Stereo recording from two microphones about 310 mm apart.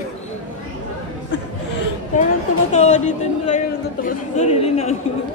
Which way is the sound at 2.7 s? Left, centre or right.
Left.